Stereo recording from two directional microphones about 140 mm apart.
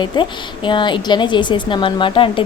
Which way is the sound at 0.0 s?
35° left (ahead or behind).